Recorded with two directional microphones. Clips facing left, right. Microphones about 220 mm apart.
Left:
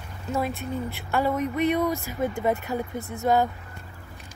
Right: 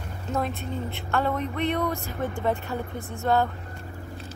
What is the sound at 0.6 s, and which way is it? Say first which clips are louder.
Speech: left 1 dB; 10° left (ahead or behind).